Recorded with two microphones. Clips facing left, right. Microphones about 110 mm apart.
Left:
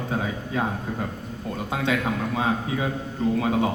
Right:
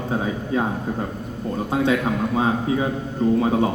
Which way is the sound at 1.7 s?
25° right (ahead or behind).